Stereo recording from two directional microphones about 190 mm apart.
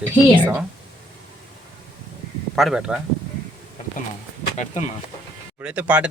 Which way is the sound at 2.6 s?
Centre (ahead or behind).